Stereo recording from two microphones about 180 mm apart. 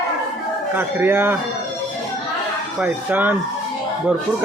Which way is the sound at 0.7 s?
10° right (ahead or behind).